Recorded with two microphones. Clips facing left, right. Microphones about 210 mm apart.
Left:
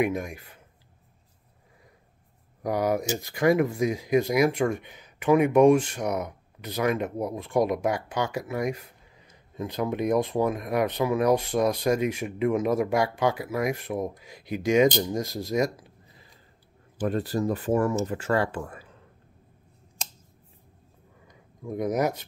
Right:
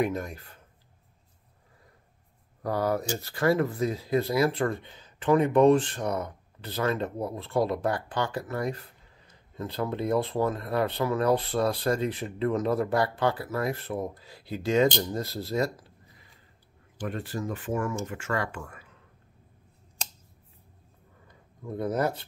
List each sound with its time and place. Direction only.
0.0 s speech: 10° left (ahead or behind)
2.6 s speech: 15° left (ahead or behind)
17.1 s speech: 35° left (ahead or behind)
21.3 s a sound: 15° left (ahead or behind)